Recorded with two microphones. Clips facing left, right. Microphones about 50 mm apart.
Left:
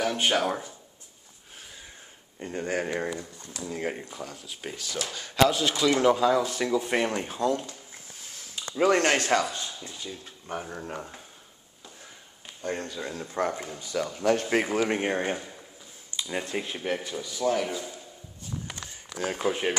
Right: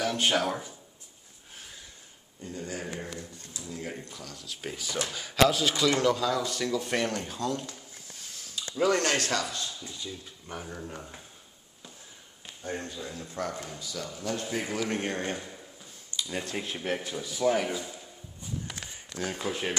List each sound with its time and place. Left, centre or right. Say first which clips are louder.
0.0 s speech: left 2 dB; centre
2.4 s a man's voice: left 7 dB; left
3.9 s speech: left 4 dB; left
4.6 s speech: right 1 dB; centre
6.0 s speech: left 5 dB; left
12.6 s speech: left 4 dB; left
13.2 s a man's voice: left 6 dB; left
15.0 s speech: left 4 dB; centre
17.0 s speech: right 1 dB; centre
19.2 s speech: left 5 dB; left